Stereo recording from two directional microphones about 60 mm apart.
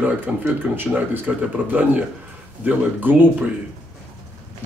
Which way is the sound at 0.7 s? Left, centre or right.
Right.